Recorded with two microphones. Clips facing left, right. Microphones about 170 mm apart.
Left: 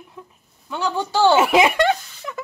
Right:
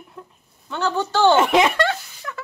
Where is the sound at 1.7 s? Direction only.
15° left (ahead or behind).